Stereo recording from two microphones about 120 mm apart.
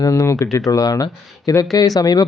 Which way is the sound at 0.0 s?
25° left (ahead or behind).